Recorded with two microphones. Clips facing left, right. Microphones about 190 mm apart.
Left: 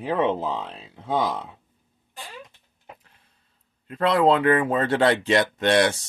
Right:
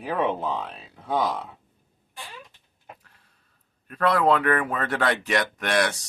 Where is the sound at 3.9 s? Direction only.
25° left (ahead or behind).